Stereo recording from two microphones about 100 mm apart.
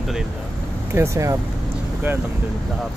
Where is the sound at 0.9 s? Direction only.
30° right (ahead or behind).